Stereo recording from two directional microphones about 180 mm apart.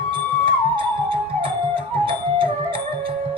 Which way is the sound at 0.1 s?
30° right (ahead or behind).